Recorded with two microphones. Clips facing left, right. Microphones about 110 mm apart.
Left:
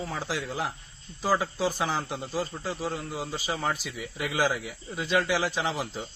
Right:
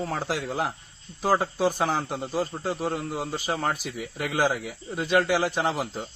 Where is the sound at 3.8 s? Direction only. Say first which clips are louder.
Right 3 dB; 50° right (ahead or behind).